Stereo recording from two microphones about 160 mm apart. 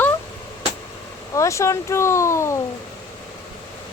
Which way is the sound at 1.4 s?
20° left (ahead or behind).